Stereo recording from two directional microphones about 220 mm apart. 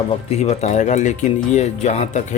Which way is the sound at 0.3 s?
30° left (ahead or behind).